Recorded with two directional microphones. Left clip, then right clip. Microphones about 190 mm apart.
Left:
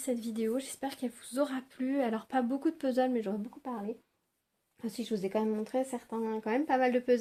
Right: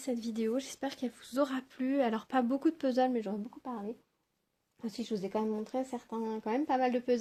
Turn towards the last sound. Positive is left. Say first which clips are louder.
# left 2 dB
turn(degrees=-25)  # may be behind; listen again after turning